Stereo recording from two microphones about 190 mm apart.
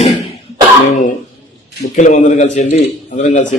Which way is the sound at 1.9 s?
40° left (ahead or behind).